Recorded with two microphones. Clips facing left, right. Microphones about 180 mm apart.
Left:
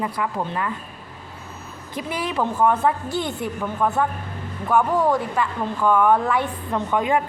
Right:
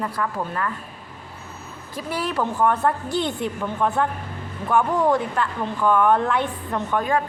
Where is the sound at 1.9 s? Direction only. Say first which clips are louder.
Even; 15° left (ahead or behind).